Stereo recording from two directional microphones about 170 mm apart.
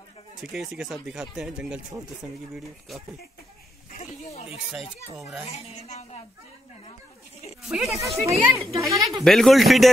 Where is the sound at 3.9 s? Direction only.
40° left (ahead or behind).